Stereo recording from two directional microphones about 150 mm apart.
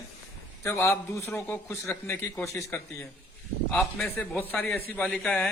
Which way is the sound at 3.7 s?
Centre (ahead or behind).